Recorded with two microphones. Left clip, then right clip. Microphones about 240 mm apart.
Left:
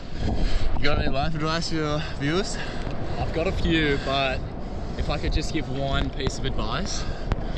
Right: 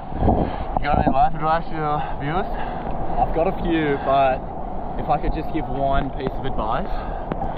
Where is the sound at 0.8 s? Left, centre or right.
Centre.